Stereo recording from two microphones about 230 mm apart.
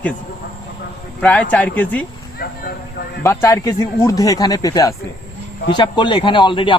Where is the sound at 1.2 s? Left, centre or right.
Centre.